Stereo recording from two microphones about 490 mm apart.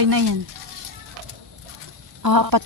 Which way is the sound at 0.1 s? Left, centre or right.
Right.